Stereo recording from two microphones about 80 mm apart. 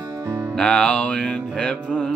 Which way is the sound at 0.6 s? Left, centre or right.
Centre.